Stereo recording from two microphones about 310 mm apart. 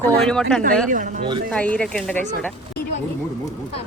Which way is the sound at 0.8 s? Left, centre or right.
Right.